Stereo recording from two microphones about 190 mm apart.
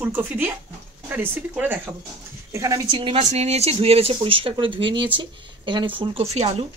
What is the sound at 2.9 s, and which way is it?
Speech, 30° right (ahead or behind).